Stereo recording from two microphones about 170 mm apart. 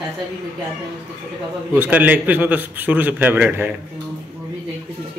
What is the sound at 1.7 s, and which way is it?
A man's voice, 10° right (ahead or behind).